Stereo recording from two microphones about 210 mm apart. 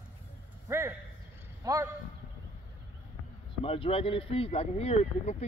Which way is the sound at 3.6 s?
25° left (ahead or behind).